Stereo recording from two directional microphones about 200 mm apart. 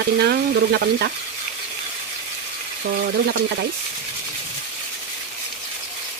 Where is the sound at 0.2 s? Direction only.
55° right (ahead or behind).